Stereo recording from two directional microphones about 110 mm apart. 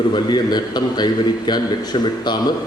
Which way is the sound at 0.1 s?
40° left (ahead or behind).